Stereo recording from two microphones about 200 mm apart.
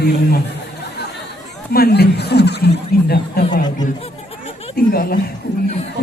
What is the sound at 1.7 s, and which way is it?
Speech, 50° left (ahead or behind).